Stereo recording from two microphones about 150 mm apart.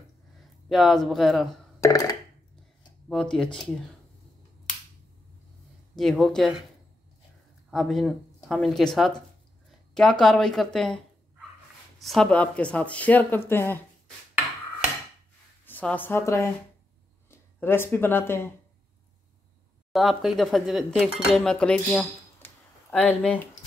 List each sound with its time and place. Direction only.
0.7 s speech: centre (ahead or behind)
1.8 s a sound: 25° left (ahead or behind)
3.1 s speech: 5° left (ahead or behind)
5.9 s speech: centre (ahead or behind)
7.7 s speech: centre (ahead or behind)
12.0 s speech: centre (ahead or behind)
15.6 s a woman's voice: 10° left (ahead or behind)
19.9 s speech: centre (ahead or behind)